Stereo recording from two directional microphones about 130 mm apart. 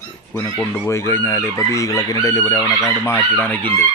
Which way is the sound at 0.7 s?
20° left (ahead or behind).